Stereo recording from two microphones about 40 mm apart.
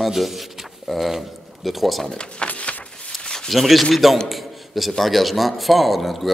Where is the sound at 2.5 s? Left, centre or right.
Left.